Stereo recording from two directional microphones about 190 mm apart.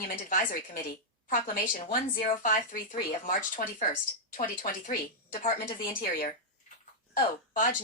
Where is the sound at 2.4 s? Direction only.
45° left (ahead or behind).